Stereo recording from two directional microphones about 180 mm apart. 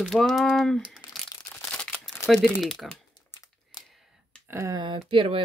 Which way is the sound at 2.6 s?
Centre (ahead or behind).